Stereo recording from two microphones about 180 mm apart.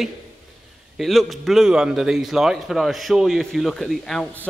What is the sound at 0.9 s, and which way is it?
A man's voice, centre (ahead or behind).